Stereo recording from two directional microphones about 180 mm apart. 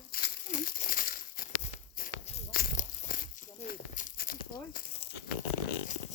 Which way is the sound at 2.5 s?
55° left (ahead or behind).